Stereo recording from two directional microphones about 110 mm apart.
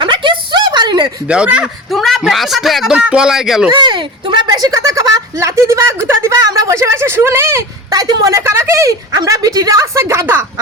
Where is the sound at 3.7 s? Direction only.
45° right (ahead or behind).